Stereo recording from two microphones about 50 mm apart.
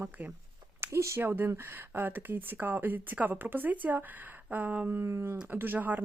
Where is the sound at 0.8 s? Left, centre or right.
Right.